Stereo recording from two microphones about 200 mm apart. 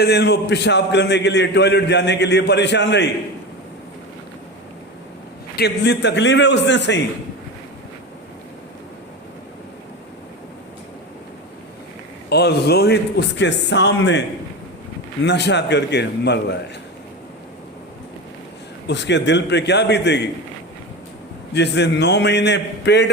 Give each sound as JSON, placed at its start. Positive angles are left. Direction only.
{"t": 0.0, "sound": "a man's voice", "side_deg": 55}
{"t": 5.5, "sound": "a man's voice", "side_deg": 55}
{"t": 12.3, "sound": "a man's voice", "side_deg": 55}
{"t": 18.9, "sound": "a man's voice", "side_deg": 60}
{"t": 21.5, "sound": "a man's voice", "side_deg": 60}